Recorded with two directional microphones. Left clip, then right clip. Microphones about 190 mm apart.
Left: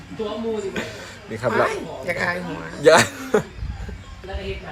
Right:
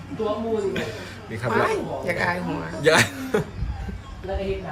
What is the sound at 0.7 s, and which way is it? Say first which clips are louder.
Speech: right 1 dB; 10° left (ahead or behind).